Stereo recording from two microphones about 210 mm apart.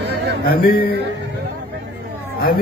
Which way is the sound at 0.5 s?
45° left (ahead or behind).